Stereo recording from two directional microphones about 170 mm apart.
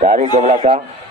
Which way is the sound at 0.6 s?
40° right (ahead or behind).